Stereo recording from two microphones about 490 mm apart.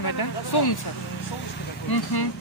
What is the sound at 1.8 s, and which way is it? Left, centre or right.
Speech, left.